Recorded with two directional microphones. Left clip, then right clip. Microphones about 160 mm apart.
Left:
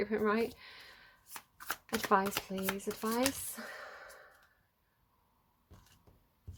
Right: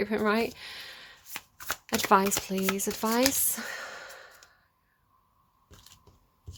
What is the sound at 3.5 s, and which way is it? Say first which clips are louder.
Sigh: right 9 dB; 45° right (ahead or behind).